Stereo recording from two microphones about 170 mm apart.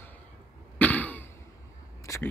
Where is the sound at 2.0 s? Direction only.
15° left (ahead or behind).